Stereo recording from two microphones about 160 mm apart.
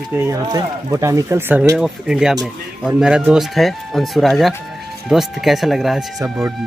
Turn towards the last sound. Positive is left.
turn(degrees=-5)  # may be behind; listen again after turning